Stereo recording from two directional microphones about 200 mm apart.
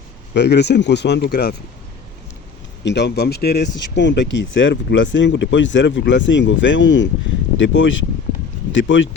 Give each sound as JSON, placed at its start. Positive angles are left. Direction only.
{"t": 0.3, "sound": "speech", "side_deg": 60}
{"t": 2.8, "sound": "speech", "side_deg": 60}